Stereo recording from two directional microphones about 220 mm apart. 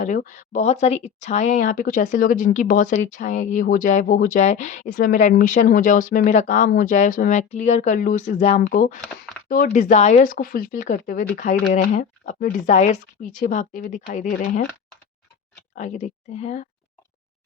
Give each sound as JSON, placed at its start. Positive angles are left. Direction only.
{"t": 0.0, "sound": "speech", "side_deg": 35}
{"t": 15.7, "sound": "speech", "side_deg": 35}